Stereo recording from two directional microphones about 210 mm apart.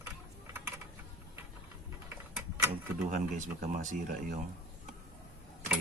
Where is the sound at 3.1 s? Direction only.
40° right (ahead or behind).